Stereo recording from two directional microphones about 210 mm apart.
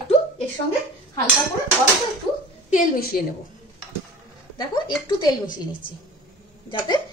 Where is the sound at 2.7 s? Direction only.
45° left (ahead or behind).